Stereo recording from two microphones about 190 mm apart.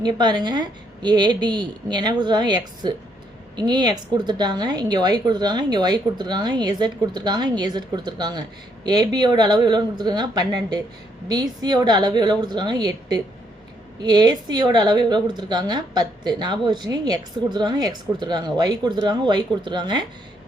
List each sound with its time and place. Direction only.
0.0 s a woman's voice: 20° right (ahead or behind)